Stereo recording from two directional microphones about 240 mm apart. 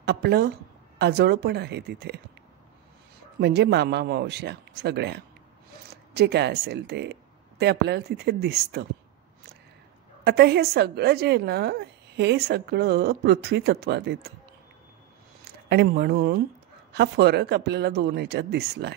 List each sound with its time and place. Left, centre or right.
0.0 s a woman's voice: right
3.3 s a woman's voice: right
10.2 s a woman's voice: right
15.7 s a woman's voice: right